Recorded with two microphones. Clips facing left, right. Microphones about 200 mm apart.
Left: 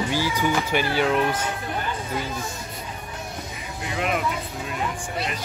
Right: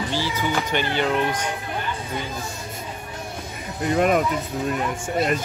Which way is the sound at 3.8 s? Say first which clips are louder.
Right 7 dB; 45° right (ahead or behind).